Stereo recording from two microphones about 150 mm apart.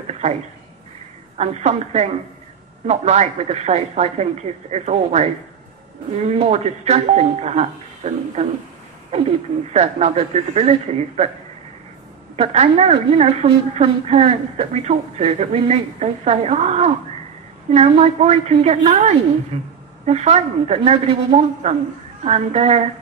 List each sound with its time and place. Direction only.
1.4 s a woman's voice: 45° right (ahead or behind)
9.7 s a woman's voice: 45° right (ahead or behind)
12.4 s a woman's voice: 45° right (ahead or behind)